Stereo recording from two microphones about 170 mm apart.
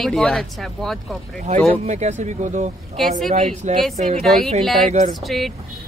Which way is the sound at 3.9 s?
40° right (ahead or behind).